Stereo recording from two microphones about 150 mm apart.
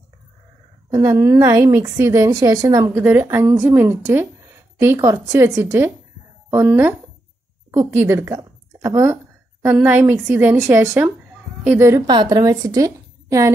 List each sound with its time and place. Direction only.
0.8 s a woman's voice: 25° right (ahead or behind)
12.1 s a woman's voice: 30° right (ahead or behind)